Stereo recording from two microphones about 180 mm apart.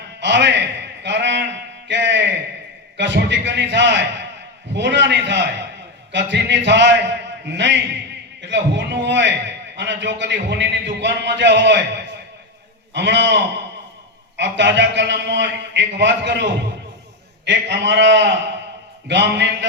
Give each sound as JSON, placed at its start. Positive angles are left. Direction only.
{"t": 0.2, "sound": "a man's voice", "side_deg": -80}